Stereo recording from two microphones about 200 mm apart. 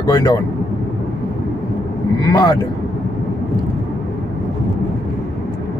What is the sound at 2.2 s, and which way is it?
Speech, 20° left (ahead or behind).